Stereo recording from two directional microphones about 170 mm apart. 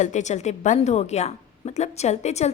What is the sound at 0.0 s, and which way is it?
A woman's voice, 45° left (ahead or behind).